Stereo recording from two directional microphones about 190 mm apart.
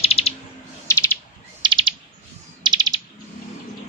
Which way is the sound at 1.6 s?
25° right (ahead or behind).